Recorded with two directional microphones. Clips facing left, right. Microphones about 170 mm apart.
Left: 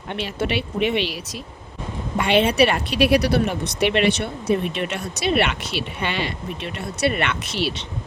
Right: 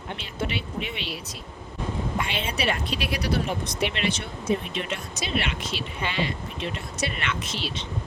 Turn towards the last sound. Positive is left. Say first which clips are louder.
# left 6 dB
turn(degrees=70)  # may be behind; listen again after turning